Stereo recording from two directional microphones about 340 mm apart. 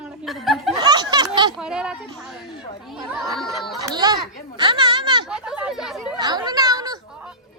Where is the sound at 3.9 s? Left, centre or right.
Centre.